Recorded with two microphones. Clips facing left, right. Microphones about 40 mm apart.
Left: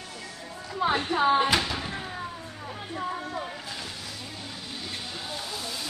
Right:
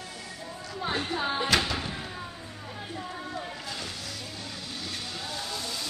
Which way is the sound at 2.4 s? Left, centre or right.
Centre.